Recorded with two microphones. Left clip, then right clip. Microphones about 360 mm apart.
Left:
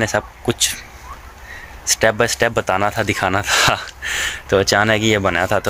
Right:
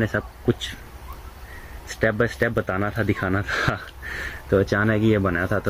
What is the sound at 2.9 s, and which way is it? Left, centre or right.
Speech, left.